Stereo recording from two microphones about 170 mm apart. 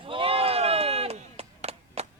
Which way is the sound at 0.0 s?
30° right (ahead or behind).